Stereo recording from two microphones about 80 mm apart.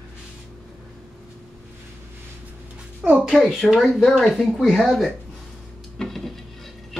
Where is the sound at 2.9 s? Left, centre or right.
Centre.